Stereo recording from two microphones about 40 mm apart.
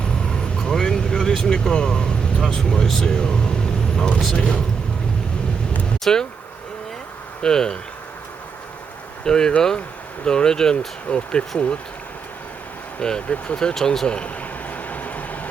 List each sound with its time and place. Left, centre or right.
0.0 s vehicle: centre
1.4 s speech: centre
3.1 s vehicle: left
4.4 s speech: left
6.1 s speech: centre
7.4 s speech: centre
9.2 s speech: centre
13.0 s speech: left
14.1 s speech: left
14.7 s vehicle: left